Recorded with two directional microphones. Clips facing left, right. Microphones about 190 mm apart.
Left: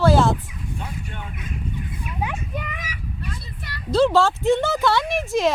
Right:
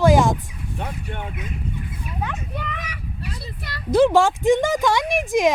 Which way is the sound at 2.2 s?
10° left (ahead or behind).